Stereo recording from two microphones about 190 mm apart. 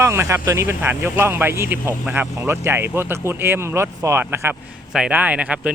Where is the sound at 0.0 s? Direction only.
15° right (ahead or behind).